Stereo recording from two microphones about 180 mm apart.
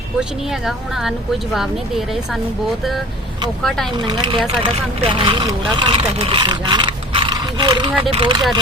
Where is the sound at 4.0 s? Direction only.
25° right (ahead or behind).